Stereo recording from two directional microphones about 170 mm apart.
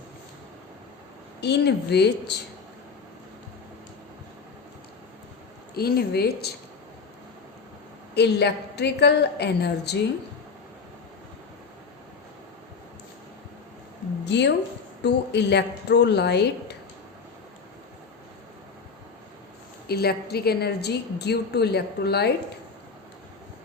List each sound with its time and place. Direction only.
1.4 s a woman's voice: 80° left
5.7 s a woman's voice: 65° left (ahead or behind)
8.1 s a woman's voice: 75° left (ahead or behind)
14.3 s a woman's voice: 90° left
19.9 s a woman's voice: 70° left (ahead or behind)